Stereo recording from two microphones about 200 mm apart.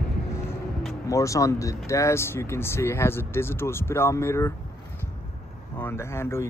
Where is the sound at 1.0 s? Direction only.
15° left (ahead or behind).